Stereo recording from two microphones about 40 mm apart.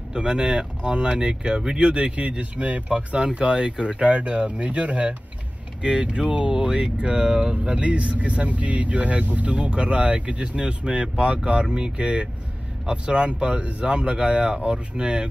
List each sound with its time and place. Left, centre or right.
0.1 s speech: right
3.2 s speech: right